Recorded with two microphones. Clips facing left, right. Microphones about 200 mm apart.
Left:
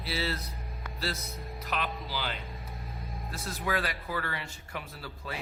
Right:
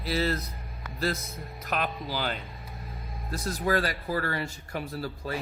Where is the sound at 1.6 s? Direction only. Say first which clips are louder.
Right 4 dB; 45° right (ahead or behind).